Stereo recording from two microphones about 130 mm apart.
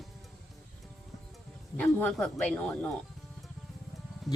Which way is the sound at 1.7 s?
10° left (ahead or behind).